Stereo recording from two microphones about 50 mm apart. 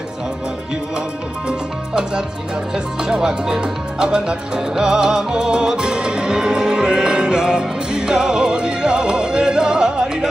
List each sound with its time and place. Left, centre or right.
1.5 s speech: centre